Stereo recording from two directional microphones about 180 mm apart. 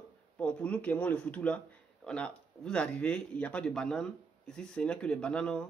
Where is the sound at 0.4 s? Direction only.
5° left (ahead or behind).